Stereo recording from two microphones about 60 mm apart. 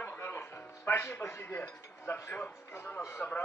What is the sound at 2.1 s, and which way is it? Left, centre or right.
Speech, left.